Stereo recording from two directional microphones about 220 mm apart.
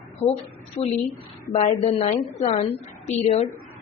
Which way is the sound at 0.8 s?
25° left (ahead or behind).